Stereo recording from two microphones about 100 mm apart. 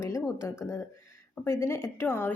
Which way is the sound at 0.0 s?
30° left (ahead or behind).